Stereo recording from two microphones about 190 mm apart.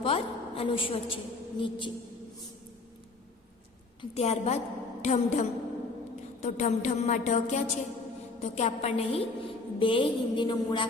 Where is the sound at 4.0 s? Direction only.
35° left (ahead or behind).